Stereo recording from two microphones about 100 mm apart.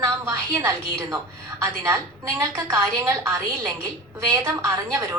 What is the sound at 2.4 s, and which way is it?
A woman's voice, 35° right (ahead or behind).